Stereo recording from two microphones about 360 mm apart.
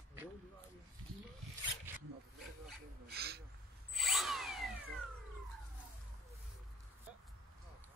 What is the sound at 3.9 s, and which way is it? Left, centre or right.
Drill, centre.